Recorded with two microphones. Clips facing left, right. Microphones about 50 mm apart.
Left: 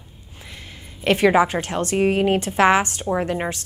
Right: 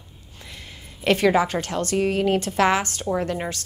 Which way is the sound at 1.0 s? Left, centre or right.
Centre.